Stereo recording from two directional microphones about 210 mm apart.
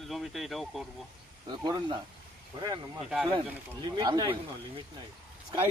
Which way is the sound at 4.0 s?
20° right (ahead or behind).